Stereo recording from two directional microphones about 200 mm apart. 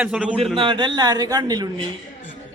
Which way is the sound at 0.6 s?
25° right (ahead or behind).